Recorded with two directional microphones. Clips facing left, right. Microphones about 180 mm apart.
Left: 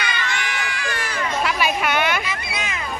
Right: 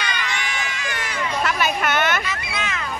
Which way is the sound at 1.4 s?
5° left (ahead or behind).